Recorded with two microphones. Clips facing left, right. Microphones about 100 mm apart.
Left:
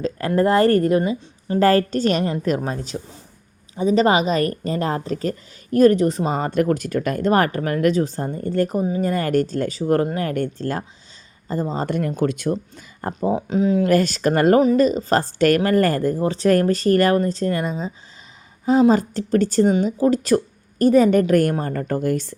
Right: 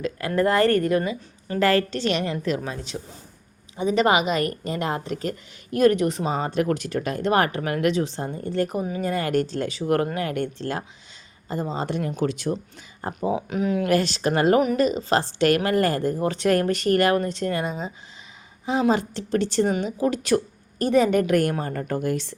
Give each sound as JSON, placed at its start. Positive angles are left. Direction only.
{"t": 0.0, "sound": "a woman's voice", "side_deg": 35}
{"t": 8.8, "sound": "a woman's voice", "side_deg": 35}
{"t": 13.5, "sound": "speech", "side_deg": 30}
{"t": 13.9, "sound": "speech", "side_deg": 45}
{"t": 14.6, "sound": "speech", "side_deg": 35}
{"t": 16.2, "sound": "a woman's voice", "side_deg": 30}